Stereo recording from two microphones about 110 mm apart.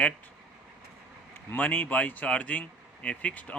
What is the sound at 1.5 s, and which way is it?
Speech, 15° left (ahead or behind).